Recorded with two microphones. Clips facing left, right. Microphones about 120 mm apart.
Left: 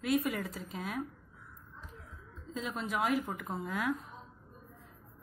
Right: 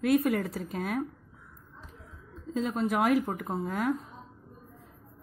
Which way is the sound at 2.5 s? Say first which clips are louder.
Right 9 dB; 40° right (ahead or behind).